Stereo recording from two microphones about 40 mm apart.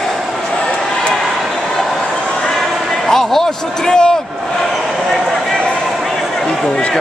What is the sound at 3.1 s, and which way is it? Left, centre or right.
A man's voice, centre.